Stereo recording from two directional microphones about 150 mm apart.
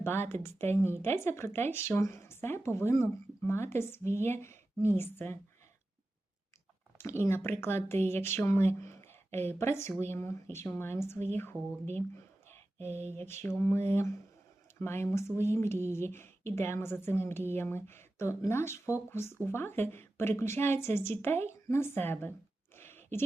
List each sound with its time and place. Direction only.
0.0 s speech: 15° left (ahead or behind)
7.0 s speech: 15° left (ahead or behind)
13.1 s speech: 15° left (ahead or behind)
22.7 s a sound: 15° left (ahead or behind)